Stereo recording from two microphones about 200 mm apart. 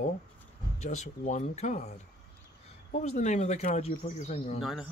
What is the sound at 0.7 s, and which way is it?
Speech, 35° left (ahead or behind).